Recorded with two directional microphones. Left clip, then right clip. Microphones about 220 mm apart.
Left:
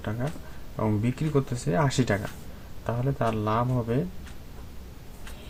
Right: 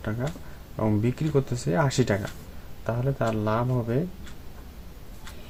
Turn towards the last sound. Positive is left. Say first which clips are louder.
# even
turn(degrees=-20)  # may be behind; listen again after turning